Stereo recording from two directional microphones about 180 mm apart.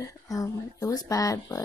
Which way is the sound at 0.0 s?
20° left (ahead or behind).